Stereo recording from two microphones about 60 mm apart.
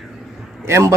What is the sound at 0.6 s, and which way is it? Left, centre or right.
Speech, right.